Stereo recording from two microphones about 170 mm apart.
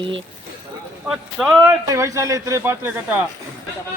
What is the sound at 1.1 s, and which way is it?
Speech, 5° right (ahead or behind).